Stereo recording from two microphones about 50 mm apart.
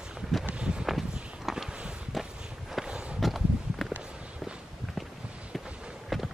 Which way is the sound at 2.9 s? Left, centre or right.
Centre.